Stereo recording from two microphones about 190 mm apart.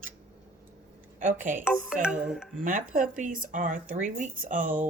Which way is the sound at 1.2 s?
45° right (ahead or behind).